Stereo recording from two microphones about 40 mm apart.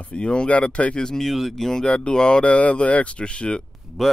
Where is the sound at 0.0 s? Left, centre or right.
Left.